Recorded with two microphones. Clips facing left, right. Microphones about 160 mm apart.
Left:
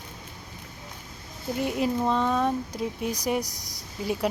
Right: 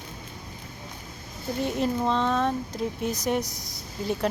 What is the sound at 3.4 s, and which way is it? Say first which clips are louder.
Speech: right 2 dB; 40° left (ahead or behind).